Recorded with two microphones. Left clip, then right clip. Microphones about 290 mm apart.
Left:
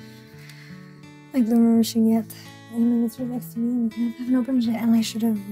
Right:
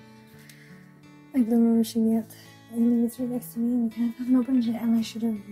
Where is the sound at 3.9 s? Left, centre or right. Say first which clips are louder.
Left 2 dB; centre.